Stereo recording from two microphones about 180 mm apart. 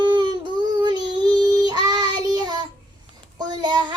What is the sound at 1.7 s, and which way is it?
Child singing, 20° right (ahead or behind).